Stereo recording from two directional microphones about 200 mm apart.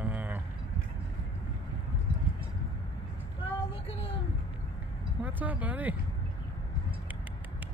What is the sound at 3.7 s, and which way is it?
Speech, 25° left (ahead or behind).